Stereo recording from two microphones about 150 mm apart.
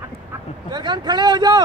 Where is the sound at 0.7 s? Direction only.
30° right (ahead or behind).